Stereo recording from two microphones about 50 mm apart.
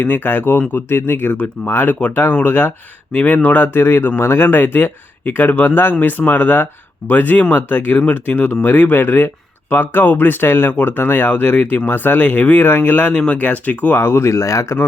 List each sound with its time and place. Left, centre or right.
0.0 s speech: left
3.1 s speech: left
4.4 s speech: left
13.1 s speech: left
14.0 s speech: left
14.3 s speech: left